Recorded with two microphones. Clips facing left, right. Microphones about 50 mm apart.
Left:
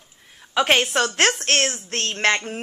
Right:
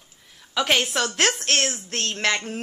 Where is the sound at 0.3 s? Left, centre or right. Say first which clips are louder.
Left 3 dB; left.